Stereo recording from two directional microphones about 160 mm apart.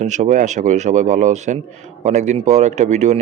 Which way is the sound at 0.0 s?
50° right (ahead or behind).